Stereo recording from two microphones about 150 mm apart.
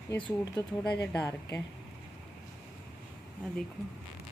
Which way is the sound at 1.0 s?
15° left (ahead or behind).